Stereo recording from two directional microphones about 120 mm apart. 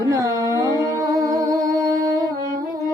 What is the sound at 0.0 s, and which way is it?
Carnatic music, 30° right (ahead or behind).